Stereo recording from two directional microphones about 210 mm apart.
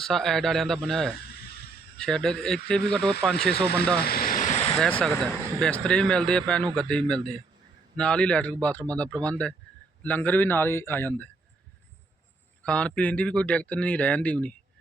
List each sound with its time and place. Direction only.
0.0 s speech: centre (ahead or behind)
4.0 s vehicle: 45° left (ahead or behind)
4.8 s speech: 5° left (ahead or behind)
12.6 s speech: 5° left (ahead or behind)